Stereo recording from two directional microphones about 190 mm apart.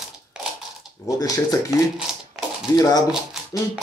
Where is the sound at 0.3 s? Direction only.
5° right (ahead or behind).